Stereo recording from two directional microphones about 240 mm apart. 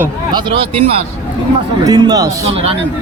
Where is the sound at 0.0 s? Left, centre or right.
Centre.